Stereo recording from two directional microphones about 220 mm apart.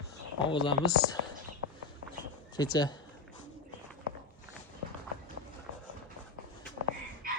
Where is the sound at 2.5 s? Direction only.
20° left (ahead or behind).